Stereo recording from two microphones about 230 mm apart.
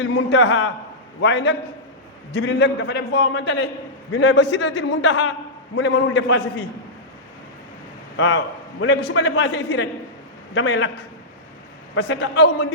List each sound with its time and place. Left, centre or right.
0.0 s a man's voice: left
8.8 s a man's voice: left